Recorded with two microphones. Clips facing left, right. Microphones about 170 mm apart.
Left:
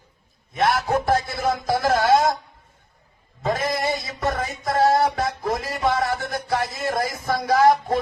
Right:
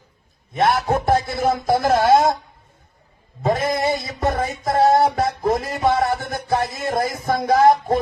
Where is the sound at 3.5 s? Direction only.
25° right (ahead or behind).